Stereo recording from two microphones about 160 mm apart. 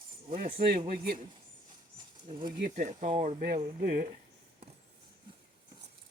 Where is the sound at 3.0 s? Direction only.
40° right (ahead or behind).